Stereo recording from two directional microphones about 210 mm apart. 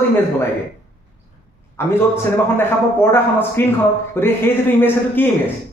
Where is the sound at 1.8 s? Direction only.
10° left (ahead or behind).